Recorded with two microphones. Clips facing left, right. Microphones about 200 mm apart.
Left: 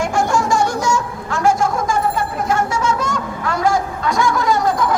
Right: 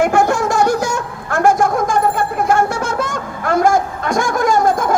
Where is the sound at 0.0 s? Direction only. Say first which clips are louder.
Right 4 dB; 60° right (ahead or behind).